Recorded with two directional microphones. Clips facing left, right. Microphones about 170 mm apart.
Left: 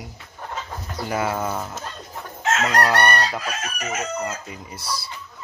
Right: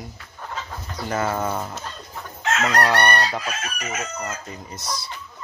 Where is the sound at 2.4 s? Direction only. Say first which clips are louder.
Left 1 dB; 30° left (ahead or behind).